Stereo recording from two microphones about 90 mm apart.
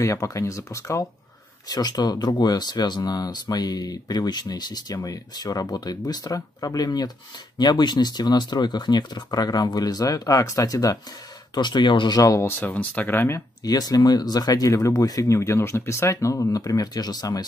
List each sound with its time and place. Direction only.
0.0 s speech: 35° left (ahead or behind)
1.7 s speech: 50° left (ahead or behind)
11.5 s speech: 55° left (ahead or behind)
12.2 s speech: 35° left (ahead or behind)
13.7 s speech: 45° left (ahead or behind)